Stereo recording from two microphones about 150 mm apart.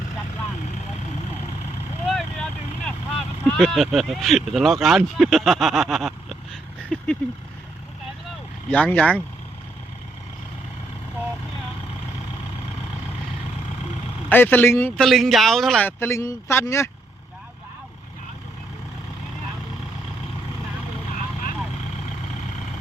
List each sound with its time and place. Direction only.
2.0 s vehicle: centre (ahead or behind)
8.7 s speech: 10° left (ahead or behind)
14.3 s speech: 10° left (ahead or behind)
14.9 s speech: centre (ahead or behind)
15.9 s speech: 15° left (ahead or behind)